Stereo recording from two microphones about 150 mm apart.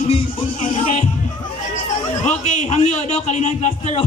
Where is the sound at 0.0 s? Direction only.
40° left (ahead or behind).